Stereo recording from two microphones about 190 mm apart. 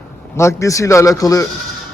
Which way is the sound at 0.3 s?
15° left (ahead or behind).